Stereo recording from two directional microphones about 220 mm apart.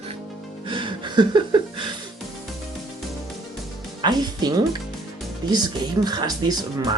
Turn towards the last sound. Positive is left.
turn(degrees=-15)  # may be behind; listen again after turning